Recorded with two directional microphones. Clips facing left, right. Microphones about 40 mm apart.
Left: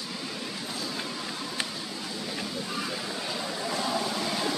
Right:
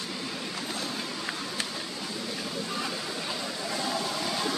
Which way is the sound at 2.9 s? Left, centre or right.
Centre.